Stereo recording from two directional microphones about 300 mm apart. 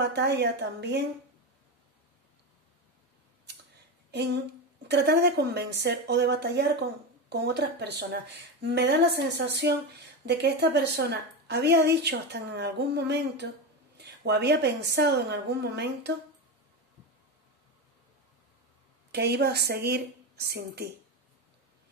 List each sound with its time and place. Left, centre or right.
0.0 s a woman's voice: right
4.1 s a sound: right
4.8 s a woman's voice: right
13.9 s a sound: right
14.8 s a woman's voice: right
19.1 s a woman's voice: right